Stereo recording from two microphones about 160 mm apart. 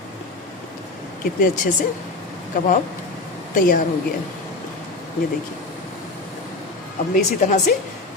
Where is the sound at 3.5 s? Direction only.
60° left (ahead or behind).